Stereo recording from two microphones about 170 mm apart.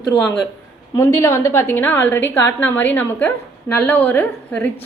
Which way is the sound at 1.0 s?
15° left (ahead or behind).